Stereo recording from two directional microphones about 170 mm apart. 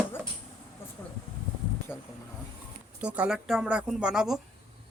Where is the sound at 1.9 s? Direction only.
15° left (ahead or behind).